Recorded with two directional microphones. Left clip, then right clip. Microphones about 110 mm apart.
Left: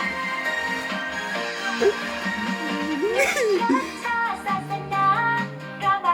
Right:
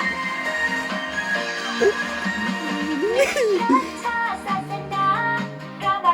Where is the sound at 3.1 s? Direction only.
15° left (ahead or behind).